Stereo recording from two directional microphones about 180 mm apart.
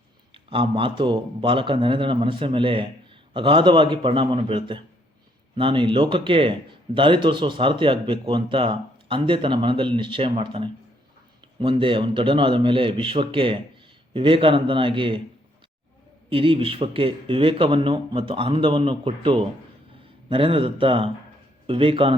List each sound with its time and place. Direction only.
0.5 s speech: 30° right (ahead or behind)
16.3 s speech: 30° right (ahead or behind)